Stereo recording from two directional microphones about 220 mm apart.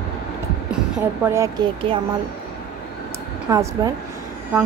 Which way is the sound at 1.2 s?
10° right (ahead or behind).